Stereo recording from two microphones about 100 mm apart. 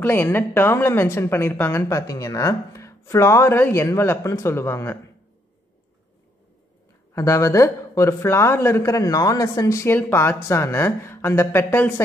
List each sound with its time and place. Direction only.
0.0 s speech: 20° left (ahead or behind)
7.2 s a man's voice: 30° left (ahead or behind)
9.9 s speech: 20° left (ahead or behind)